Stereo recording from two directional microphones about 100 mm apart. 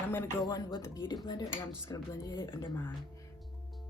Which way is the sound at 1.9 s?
30° left (ahead or behind).